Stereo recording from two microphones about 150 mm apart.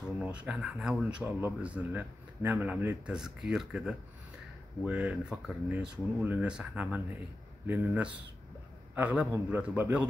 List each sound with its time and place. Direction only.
0.2 s speech: 10° right (ahead or behind)